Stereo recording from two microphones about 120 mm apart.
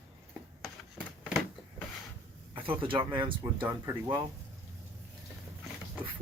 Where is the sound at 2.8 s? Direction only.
45° right (ahead or behind).